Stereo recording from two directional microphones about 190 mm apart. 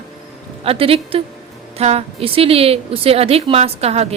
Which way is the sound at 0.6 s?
30° right (ahead or behind).